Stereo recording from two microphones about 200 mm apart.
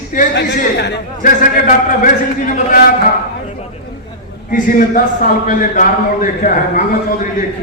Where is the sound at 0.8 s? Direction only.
45° left (ahead or behind).